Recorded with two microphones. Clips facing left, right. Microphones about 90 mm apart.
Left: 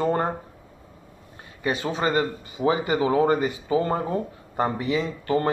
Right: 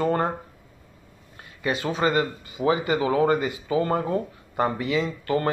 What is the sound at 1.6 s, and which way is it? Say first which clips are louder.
Speech: right 1 dB; 25° left (ahead or behind).